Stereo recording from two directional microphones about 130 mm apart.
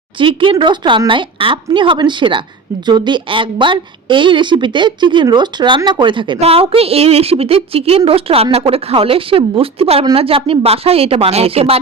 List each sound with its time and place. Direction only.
0.2 s a woman's voice: 40° right (ahead or behind)
6.4 s a woman's voice: 50° right (ahead or behind)